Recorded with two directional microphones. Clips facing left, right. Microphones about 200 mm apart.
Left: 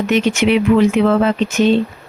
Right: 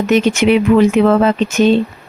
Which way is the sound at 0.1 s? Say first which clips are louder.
Right 3 dB; 45° right (ahead or behind).